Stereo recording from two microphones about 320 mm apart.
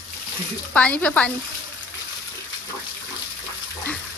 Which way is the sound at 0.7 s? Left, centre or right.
Centre.